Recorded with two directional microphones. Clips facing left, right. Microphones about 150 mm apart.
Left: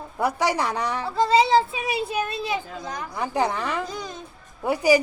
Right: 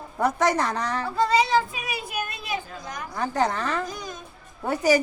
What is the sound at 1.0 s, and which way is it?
A child's voice, 30° left (ahead or behind).